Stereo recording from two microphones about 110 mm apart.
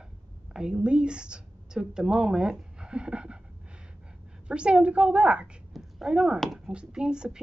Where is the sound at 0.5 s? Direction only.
5° right (ahead or behind).